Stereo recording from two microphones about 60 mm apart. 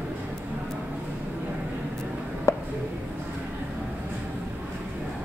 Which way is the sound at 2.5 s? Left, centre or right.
Left.